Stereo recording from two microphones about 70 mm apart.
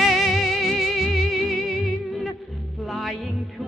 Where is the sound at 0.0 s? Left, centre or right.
Centre.